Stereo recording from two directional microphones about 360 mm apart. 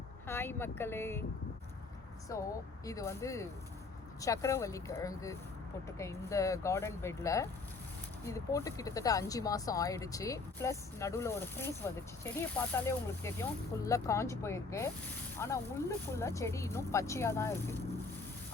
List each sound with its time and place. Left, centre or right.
0.3 s speech: centre
2.3 s speech: centre